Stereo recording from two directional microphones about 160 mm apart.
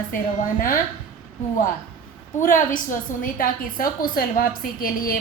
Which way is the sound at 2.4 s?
55° left (ahead or behind).